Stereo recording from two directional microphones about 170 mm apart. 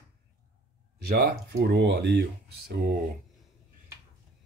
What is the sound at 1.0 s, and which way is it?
Speech, 65° right (ahead or behind).